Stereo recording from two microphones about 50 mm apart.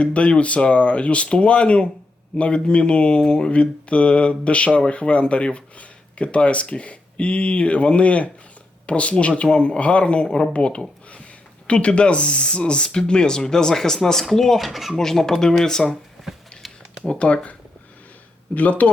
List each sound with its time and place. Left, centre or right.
0.0 s speech: left; by 14.9 s centre
14.9 s speech: centre
16.2 s a sound: centre
17.1 s speech: left
18.5 s speech: left